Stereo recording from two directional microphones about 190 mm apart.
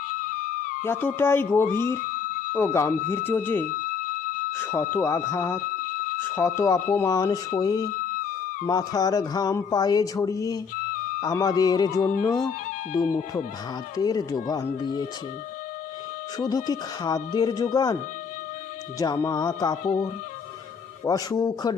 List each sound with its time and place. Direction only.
0.9 s speech: 10° left (ahead or behind)
13.9 s speech: 20° left (ahead or behind)
16.4 s speech: 20° left (ahead or behind)
18.9 s speech: 15° left (ahead or behind)
21.0 s speech: 20° left (ahead or behind)